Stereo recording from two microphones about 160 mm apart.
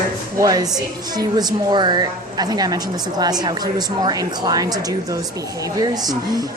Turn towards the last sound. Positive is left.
turn(degrees=-25)  # may be behind; listen again after turning